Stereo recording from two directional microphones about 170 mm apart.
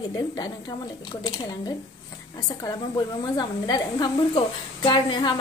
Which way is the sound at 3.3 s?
25° left (ahead or behind).